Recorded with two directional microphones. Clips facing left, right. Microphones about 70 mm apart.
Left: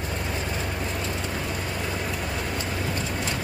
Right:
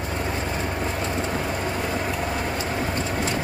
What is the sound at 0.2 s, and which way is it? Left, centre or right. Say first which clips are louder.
Vehicle: right 3 dB; right.